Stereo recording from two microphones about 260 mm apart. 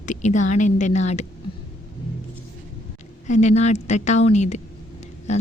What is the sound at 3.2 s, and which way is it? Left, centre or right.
Speech, left.